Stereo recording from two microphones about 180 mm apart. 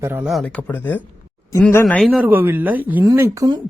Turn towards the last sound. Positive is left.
turn(degrees=-15)  # may be behind; listen again after turning